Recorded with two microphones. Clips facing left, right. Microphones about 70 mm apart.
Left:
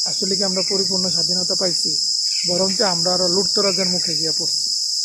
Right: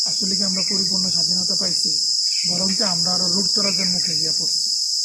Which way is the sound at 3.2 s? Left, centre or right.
Left.